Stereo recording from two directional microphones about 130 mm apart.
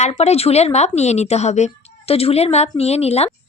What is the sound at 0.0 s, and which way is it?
A woman's voice, 55° left (ahead or behind).